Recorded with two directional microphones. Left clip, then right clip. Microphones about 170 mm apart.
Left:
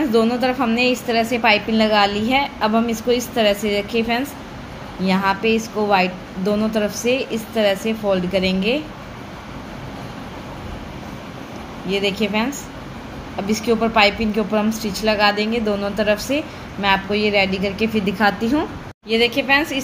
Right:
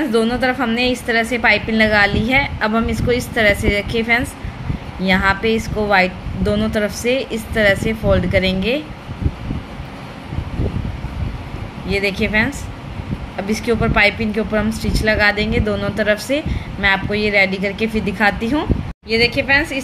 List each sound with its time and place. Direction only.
0.1 s a woman's voice: 15° right (ahead or behind)
11.9 s a woman's voice: 15° right (ahead or behind)